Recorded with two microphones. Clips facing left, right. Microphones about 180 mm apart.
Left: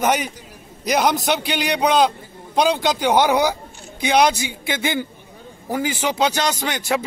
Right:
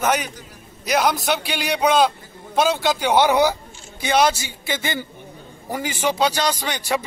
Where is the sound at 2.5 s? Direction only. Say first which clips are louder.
Left 1 dB; 15° left (ahead or behind).